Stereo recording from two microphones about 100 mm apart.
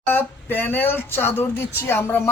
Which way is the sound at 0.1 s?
20° left (ahead or behind).